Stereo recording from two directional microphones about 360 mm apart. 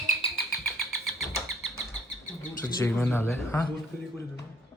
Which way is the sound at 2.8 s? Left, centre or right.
Centre.